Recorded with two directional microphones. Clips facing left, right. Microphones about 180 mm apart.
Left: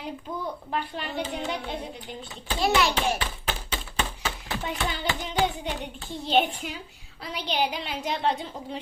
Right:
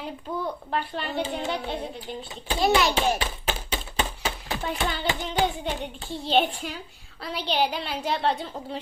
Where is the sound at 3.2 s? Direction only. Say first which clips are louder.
Right 2 dB; 20° right (ahead or behind).